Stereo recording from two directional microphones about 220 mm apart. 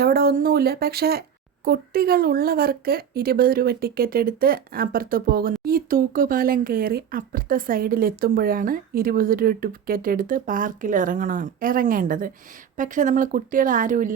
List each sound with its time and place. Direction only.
0.0 s speech: 45° right (ahead or behind)